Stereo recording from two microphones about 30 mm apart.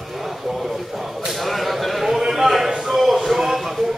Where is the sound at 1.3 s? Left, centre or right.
Centre.